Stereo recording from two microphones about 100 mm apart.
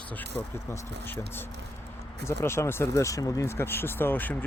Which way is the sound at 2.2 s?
25° left (ahead or behind).